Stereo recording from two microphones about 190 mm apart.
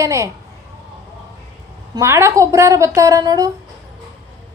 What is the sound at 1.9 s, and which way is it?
A woman's voice, 15° right (ahead or behind).